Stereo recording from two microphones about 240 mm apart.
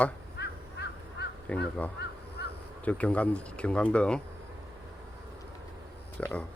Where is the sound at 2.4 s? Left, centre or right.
Left.